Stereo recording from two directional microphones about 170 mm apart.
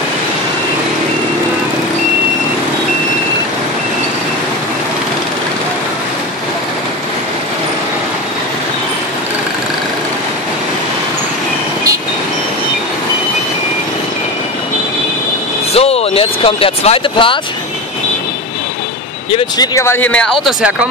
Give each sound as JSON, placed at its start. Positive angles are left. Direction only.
{"t": 15.7, "sound": "a sound", "side_deg": 35}
{"t": 19.3, "sound": "speech", "side_deg": 25}
{"t": 20.4, "sound": "speech", "side_deg": -10}